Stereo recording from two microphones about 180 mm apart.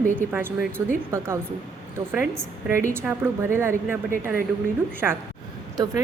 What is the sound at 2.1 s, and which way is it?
A woman's voice, 10° right (ahead or behind).